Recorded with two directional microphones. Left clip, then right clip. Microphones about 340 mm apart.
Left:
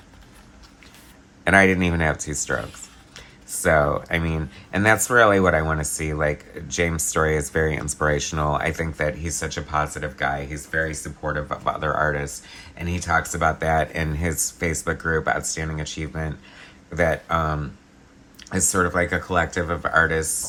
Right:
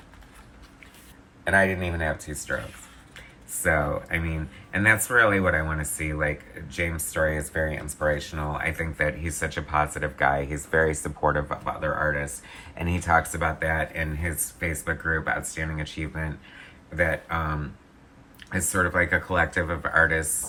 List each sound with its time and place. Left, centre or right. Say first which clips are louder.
1.5 s speech: left 5 dB; left; by 11.7 s centre
11.8 s speech: left 1 dB; centre